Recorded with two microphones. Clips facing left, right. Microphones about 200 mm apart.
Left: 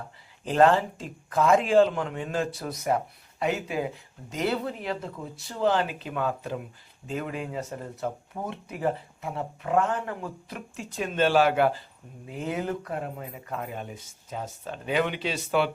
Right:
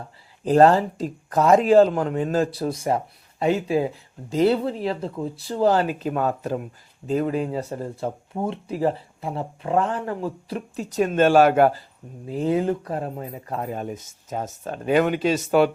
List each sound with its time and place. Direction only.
0.4 s speech: 35° right (ahead or behind)
12.2 s speech: 35° right (ahead or behind)